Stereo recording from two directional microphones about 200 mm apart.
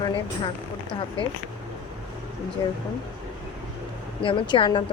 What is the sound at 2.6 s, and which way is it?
Speech, 20° left (ahead or behind).